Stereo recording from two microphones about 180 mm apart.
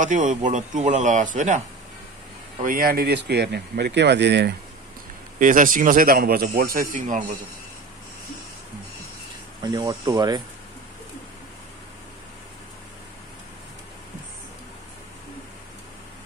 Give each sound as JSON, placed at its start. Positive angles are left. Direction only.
{"t": 0.0, "sound": "speech", "side_deg": -45}
{"t": 2.6, "sound": "speech", "side_deg": -50}
{"t": 5.4, "sound": "speech", "side_deg": -50}
{"t": 9.6, "sound": "speech", "side_deg": -20}